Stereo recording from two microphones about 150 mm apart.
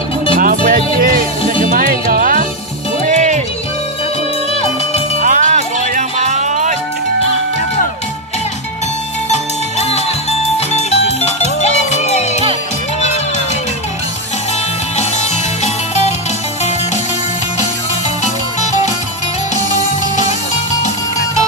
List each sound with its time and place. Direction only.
0.4 s music: 70° right (ahead or behind)
3.1 s music: 55° right (ahead or behind)
5.2 s music: 60° right (ahead or behind)
9.3 s music: 45° left (ahead or behind)